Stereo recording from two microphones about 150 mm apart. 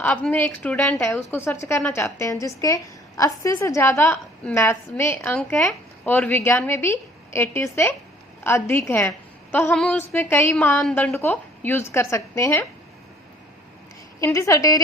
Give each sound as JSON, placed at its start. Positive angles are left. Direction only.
{"t": 0.0, "sound": "a woman's voice", "side_deg": 10}
{"t": 9.7, "sound": "a woman's voice", "side_deg": 5}
{"t": 10.2, "sound": "a woman's voice", "side_deg": 15}
{"t": 14.3, "sound": "a woman's voice", "side_deg": 20}